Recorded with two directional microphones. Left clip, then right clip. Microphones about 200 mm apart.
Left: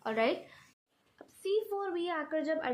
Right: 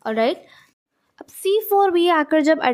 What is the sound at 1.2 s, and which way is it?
A woman's voice, 50° right (ahead or behind).